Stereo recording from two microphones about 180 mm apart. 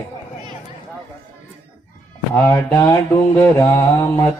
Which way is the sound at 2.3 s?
15° left (ahead or behind).